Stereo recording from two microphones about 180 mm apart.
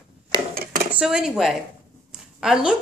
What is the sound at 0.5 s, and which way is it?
Dishes, 55° right (ahead or behind).